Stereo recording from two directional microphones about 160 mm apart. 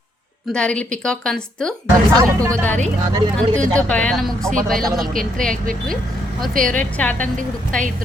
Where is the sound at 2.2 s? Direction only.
20° right (ahead or behind).